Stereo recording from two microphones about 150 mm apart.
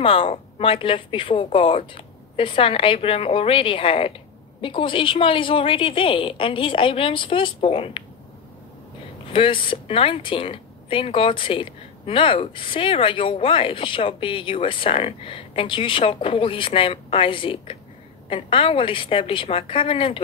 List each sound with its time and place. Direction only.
0.0 s speech: 35° left (ahead or behind)
9.3 s speech: 35° left (ahead or behind)